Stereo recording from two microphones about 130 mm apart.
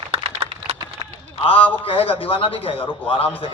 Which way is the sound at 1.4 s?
45° left (ahead or behind).